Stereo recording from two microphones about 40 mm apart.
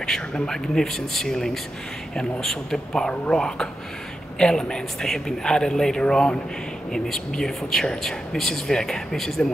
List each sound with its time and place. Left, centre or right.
0.0 s speech: centre